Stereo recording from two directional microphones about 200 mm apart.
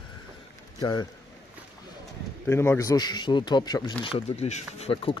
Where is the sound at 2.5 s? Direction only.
10° left (ahead or behind).